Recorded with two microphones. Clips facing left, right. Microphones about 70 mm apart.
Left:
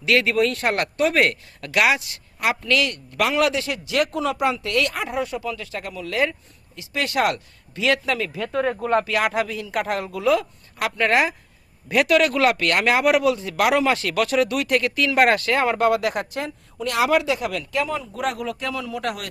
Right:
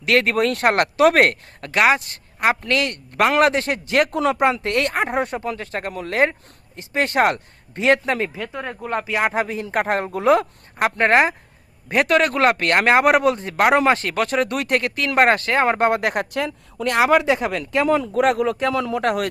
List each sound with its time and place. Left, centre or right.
0.0 s a man's voice: right
1.6 s a man's voice: right
8.4 s speech: centre
9.0 s a man's voice: right
17.8 s a man's voice: right